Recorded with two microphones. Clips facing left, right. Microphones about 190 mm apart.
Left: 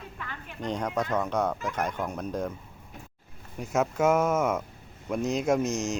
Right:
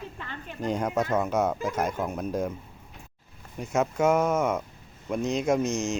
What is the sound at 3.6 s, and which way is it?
Speech, centre (ahead or behind).